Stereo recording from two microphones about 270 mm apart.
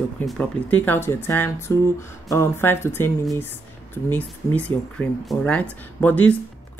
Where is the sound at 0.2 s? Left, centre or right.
Centre.